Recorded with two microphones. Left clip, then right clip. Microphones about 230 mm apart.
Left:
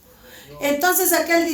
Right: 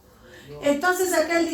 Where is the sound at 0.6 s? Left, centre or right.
Left.